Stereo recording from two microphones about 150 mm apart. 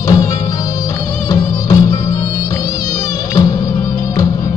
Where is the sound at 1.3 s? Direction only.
25° left (ahead or behind).